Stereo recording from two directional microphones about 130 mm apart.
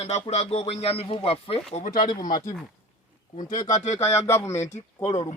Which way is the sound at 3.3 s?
75° left (ahead or behind).